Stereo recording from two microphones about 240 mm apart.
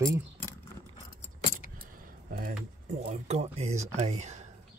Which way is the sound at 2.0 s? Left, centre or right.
Right.